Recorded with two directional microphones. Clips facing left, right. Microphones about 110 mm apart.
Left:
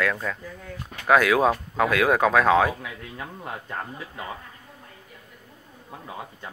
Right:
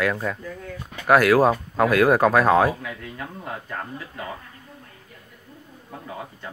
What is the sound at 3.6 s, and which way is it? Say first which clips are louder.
Speech: right 1 dB; 20° left (ahead or behind).